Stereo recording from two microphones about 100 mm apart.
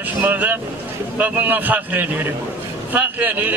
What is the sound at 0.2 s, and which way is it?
A man's voice, 20° right (ahead or behind).